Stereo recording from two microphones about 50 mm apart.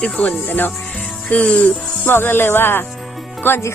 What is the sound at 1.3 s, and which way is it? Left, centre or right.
Speech, left.